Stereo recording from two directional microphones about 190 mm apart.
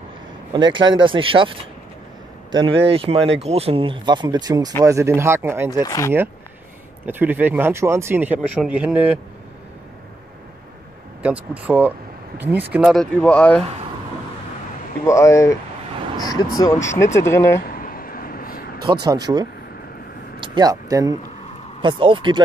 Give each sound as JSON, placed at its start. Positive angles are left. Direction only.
{"t": 0.5, "sound": "speech", "side_deg": -25}
{"t": 5.9, "sound": "speech", "side_deg": 15}
{"t": 7.1, "sound": "speech", "side_deg": -10}
{"t": 11.2, "sound": "speech", "side_deg": -5}
{"t": 15.0, "sound": "speech", "side_deg": 15}
{"t": 17.6, "sound": "a sound", "side_deg": 50}
{"t": 18.9, "sound": "speech", "side_deg": -20}